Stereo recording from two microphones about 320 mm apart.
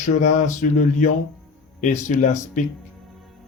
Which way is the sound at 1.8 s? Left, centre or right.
Left.